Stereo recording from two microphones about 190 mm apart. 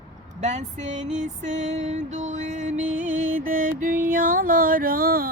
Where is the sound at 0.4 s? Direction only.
40° right (ahead or behind).